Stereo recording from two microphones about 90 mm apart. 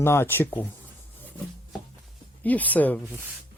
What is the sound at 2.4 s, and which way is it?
Speech, 20° left (ahead or behind).